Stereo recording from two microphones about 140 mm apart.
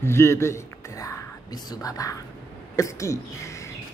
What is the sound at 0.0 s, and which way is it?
Speech, 20° left (ahead or behind).